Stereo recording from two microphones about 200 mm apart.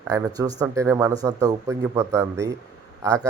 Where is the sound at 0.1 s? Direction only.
20° right (ahead or behind).